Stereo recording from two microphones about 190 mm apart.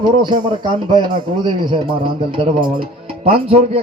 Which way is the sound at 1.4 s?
25° right (ahead or behind).